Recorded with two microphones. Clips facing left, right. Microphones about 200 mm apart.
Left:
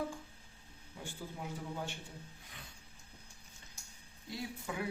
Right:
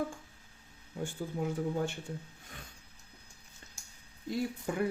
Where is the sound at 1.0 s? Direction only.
50° right (ahead or behind).